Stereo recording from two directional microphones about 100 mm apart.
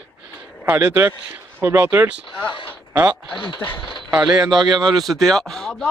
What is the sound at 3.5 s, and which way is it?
Speech, 20° left (ahead or behind).